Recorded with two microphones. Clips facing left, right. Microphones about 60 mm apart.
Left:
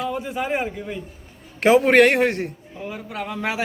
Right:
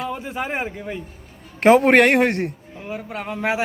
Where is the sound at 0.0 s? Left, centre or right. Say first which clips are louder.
Left 1 dB; right.